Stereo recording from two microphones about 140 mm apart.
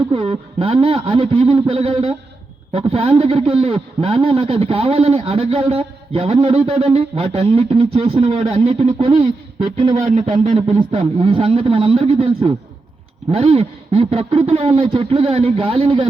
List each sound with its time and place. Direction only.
0.1 s a man's voice: 40° right (ahead or behind)
10.1 s speech: 65° right (ahead or behind)
10.5 s a man's voice: 40° right (ahead or behind)